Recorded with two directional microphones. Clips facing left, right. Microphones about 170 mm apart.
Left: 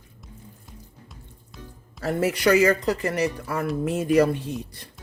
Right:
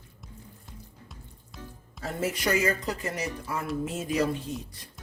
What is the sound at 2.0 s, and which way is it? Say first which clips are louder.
Speech: left 7 dB; 70° left (ahead or behind).